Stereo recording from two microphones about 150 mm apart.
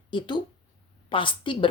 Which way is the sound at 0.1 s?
30° left (ahead or behind).